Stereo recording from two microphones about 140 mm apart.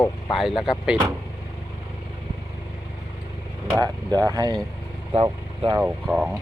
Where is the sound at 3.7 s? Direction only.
30° right (ahead or behind).